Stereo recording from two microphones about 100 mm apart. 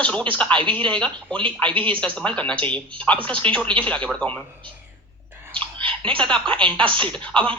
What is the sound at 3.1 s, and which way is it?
Speech, 60° right (ahead or behind).